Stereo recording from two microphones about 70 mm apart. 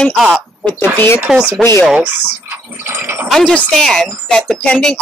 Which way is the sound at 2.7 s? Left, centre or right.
Right.